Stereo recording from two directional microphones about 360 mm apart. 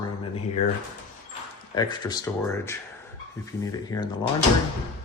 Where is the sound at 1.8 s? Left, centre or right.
Centre.